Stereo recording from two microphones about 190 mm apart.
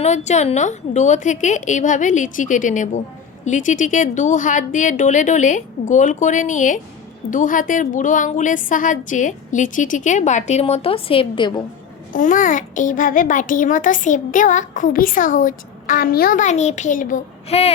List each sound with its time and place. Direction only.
0.0 s a woman's voice: 35° left (ahead or behind)
12.1 s a child's voice: 45° left (ahead or behind)